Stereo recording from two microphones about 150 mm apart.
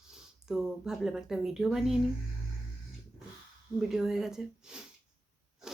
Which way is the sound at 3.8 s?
5° right (ahead or behind).